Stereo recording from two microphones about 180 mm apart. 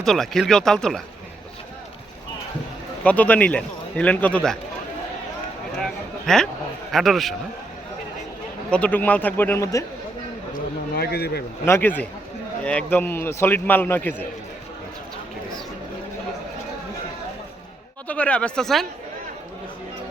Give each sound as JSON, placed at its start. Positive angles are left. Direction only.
{"t": 0.0, "sound": "speech", "side_deg": 0}
{"t": 3.0, "sound": "a man's voice", "side_deg": 10}
{"t": 5.7, "sound": "a sound", "side_deg": 0}
{"t": 6.9, "sound": "speech", "side_deg": 0}
{"t": 8.7, "sound": "a man's voice", "side_deg": 10}
{"t": 10.5, "sound": "a sound", "side_deg": 60}
{"t": 11.6, "sound": "a man's voice", "side_deg": 10}
{"t": 18.1, "sound": "a man's voice", "side_deg": 5}